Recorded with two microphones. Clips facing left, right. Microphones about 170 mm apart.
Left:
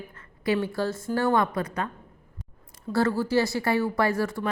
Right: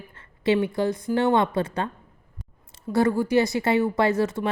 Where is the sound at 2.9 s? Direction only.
15° right (ahead or behind).